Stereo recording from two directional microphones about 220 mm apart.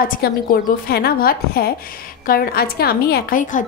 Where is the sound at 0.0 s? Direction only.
40° left (ahead or behind).